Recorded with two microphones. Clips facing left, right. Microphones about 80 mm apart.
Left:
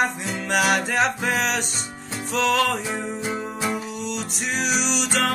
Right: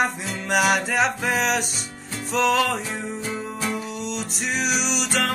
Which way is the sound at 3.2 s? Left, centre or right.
Centre.